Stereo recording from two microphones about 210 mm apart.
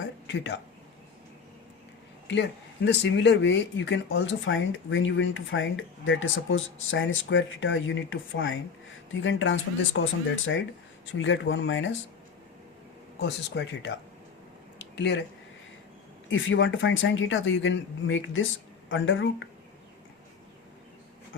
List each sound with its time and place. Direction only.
0.3 s speech: 60° left (ahead or behind)
2.2 s speech: 55° left (ahead or behind)
13.1 s speech: 55° left (ahead or behind)
14.9 s speech: 55° left (ahead or behind)
16.3 s speech: 65° left (ahead or behind)